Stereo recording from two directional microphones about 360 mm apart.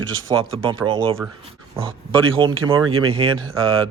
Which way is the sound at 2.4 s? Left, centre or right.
Centre.